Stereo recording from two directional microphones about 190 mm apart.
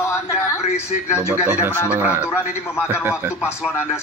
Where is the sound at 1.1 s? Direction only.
10° right (ahead or behind).